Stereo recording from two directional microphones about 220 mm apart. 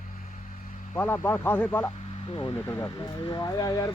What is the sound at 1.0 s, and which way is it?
Speech, 10° left (ahead or behind).